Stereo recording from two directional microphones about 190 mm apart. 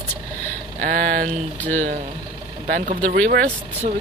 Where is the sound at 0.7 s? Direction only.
45° right (ahead or behind).